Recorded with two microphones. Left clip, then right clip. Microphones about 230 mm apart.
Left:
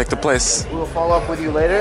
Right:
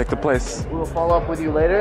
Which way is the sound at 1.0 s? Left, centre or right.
Right.